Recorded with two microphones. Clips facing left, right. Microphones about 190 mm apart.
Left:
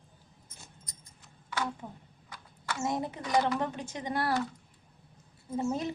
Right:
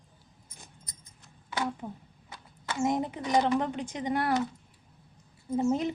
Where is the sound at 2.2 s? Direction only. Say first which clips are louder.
Right 1 dB; 25° right (ahead or behind).